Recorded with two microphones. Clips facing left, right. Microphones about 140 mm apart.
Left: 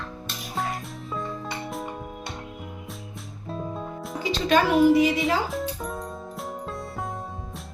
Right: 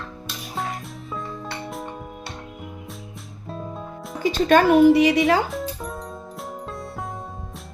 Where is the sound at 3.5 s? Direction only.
Centre (ahead or behind).